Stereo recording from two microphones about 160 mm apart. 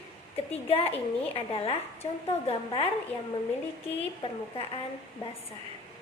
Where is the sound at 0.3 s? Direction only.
35° left (ahead or behind).